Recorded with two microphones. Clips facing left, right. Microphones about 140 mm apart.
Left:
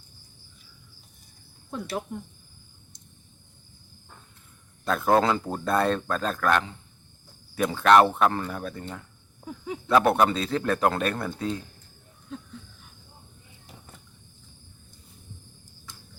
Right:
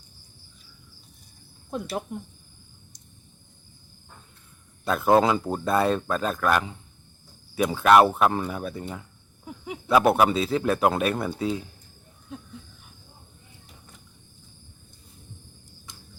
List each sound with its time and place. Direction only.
1.7 s speech: 20° right (ahead or behind)
4.9 s speech: 5° right (ahead or behind)